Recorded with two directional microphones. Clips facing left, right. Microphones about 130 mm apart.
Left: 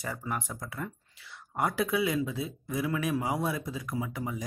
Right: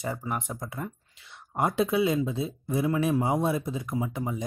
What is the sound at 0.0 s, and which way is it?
Speech, 20° right (ahead or behind).